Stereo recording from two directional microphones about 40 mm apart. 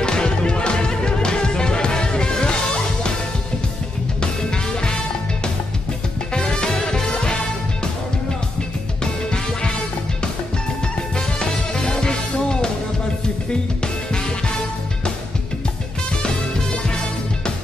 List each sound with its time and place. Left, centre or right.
0.0 s music: left
4.2 s music: centre
6.3 s music: left
9.0 s music: left
11.1 s music: left
16.2 s music: left